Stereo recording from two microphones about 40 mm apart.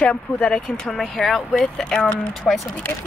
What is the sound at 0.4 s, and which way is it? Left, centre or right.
Speech, left.